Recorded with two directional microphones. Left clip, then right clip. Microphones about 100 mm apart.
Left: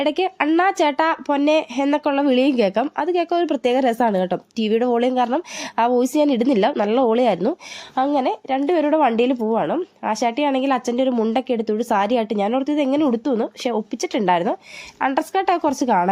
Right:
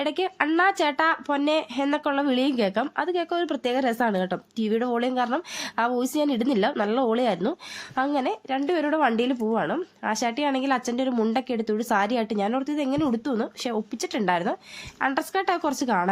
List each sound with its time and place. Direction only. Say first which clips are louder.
0.0 s a woman's voice: left 5 dB; 40° left (ahead or behind)